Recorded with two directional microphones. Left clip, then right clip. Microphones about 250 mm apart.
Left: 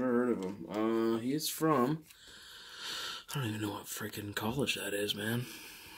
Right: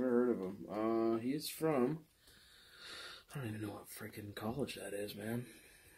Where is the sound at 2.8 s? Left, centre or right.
Left.